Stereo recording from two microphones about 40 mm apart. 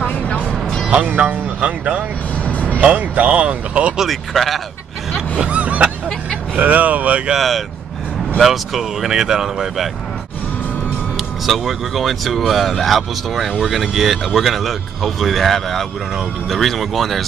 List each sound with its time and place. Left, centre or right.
0.0 s music: left
1.1 s speech: right
2.4 s vehicle: left
2.8 s speech: right
4.0 s speech: centre
5.5 s a sound: right
6.6 s speech: right
7.3 s speech: centre
11.4 s speech: centre